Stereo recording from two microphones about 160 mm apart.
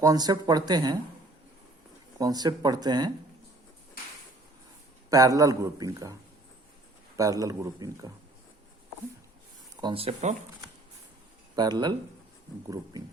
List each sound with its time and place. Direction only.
0.0 s a man's voice: 20° right (ahead or behind)
2.1 s a man's voice: 25° right (ahead or behind)
5.0 s a man's voice: 20° right (ahead or behind)
7.2 s a man's voice: 20° right (ahead or behind)
9.8 s speech: 35° right (ahead or behind)
11.5 s a man's voice: 25° right (ahead or behind)